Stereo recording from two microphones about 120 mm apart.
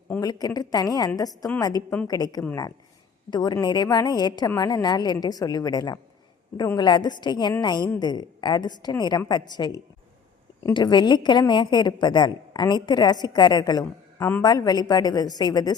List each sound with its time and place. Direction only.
0.2 s a woman's voice: 30° left (ahead or behind)
14.2 s speech: 15° left (ahead or behind)
14.4 s a woman's voice: 35° left (ahead or behind)